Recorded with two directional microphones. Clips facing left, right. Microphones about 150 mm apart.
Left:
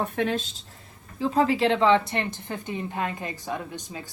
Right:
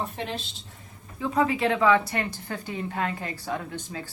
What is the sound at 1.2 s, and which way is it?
A woman's voice, 30° left (ahead or behind).